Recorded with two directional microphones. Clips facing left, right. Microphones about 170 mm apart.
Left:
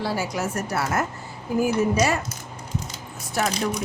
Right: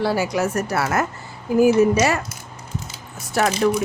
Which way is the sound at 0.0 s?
75° right (ahead or behind).